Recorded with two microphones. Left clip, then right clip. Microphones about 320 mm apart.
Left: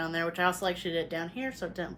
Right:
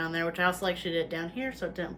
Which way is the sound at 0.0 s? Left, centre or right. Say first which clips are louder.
Right 1 dB; centre.